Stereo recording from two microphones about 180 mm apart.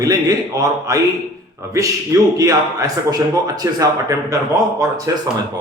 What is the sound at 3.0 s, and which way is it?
A man's voice, 20° right (ahead or behind).